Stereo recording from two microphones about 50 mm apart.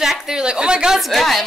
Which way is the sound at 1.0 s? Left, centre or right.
Centre.